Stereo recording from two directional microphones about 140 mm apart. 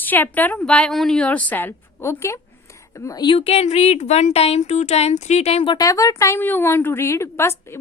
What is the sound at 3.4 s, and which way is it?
Speech, 45° left (ahead or behind).